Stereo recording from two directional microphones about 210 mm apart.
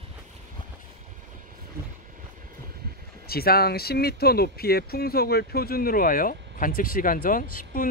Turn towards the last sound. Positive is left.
turn(degrees=40)  # may be behind; listen again after turning